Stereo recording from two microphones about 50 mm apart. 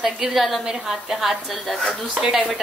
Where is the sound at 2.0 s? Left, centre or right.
Centre.